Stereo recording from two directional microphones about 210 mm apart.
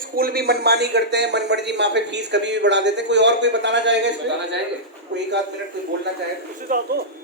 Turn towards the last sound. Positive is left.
turn(degrees=-40)  # may be behind; listen again after turning